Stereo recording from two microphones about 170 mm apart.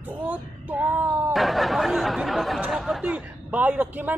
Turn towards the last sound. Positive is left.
turn(degrees=-10)  # may be behind; listen again after turning